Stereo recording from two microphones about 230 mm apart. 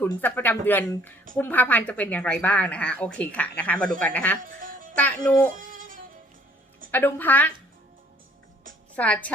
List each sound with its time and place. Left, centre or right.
0.0 s speech: centre
5.5 s music: right
6.9 s speech: centre
9.0 s speech: centre